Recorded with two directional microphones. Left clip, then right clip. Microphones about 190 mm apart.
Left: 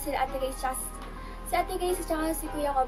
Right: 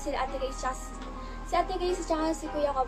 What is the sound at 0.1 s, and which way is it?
Music, 5° left (ahead or behind).